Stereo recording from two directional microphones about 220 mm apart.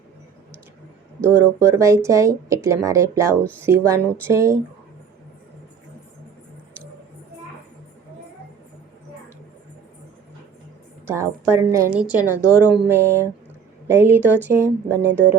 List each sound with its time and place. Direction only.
1.2 s speech: 10° right (ahead or behind)
11.0 s speech: 10° right (ahead or behind)
12.4 s a woman's voice: 10° left (ahead or behind)
12.7 s a sound: 5° right (ahead or behind)
13.1 s a woman's voice: 10° left (ahead or behind)
13.8 s speech: 10° right (ahead or behind)
15.0 s speech: 55° right (ahead or behind)